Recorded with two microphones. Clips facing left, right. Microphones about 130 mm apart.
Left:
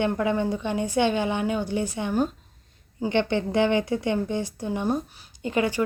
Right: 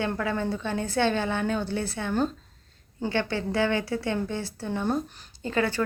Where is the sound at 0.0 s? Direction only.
20° left (ahead or behind).